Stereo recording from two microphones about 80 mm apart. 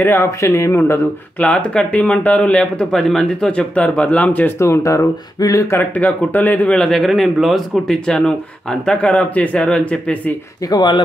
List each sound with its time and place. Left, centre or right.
0.0 s speech: left
1.4 s a man's voice: centre
4.6 s speech: left
5.8 s speech: centre
6.7 s a man's voice: centre
10.7 s speech: left